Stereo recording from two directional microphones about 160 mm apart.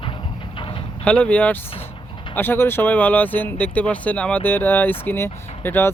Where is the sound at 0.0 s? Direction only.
30° left (ahead or behind).